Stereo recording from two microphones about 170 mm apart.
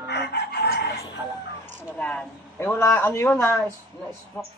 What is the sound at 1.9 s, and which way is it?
A man's voice, 10° left (ahead or behind).